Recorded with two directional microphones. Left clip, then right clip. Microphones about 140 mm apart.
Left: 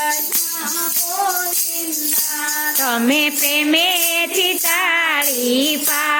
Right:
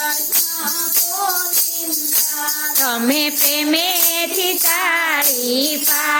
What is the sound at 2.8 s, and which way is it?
Music, 5° left (ahead or behind).